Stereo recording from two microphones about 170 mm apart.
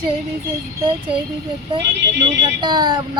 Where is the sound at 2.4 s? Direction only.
25° right (ahead or behind).